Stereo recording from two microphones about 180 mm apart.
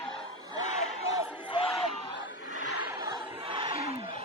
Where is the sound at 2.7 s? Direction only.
15° right (ahead or behind); by 4.2 s 30° right (ahead or behind).